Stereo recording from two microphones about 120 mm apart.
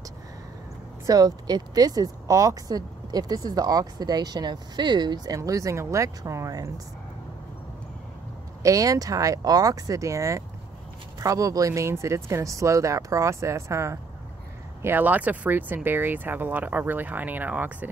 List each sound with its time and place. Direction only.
1.0 s speech: 30° right (ahead or behind)
8.6 s speech: 30° right (ahead or behind)